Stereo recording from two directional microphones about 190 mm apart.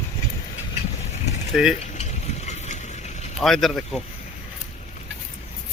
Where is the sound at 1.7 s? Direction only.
35° left (ahead or behind).